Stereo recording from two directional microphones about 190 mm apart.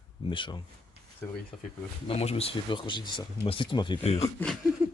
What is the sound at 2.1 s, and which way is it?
Speech, 30° left (ahead or behind).